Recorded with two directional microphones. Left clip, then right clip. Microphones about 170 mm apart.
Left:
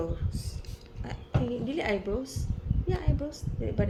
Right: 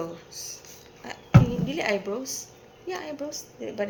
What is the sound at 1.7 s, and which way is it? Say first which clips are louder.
A woman's voice: right 3 dB; 15° left (ahead or behind).